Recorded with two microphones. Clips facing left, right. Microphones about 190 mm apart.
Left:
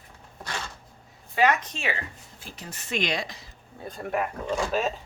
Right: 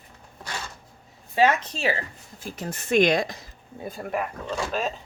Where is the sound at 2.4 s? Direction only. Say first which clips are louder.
Right 9 dB; 50° right (ahead or behind).